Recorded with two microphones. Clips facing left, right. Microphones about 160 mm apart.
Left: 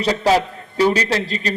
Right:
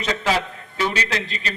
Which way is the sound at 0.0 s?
35° left (ahead or behind).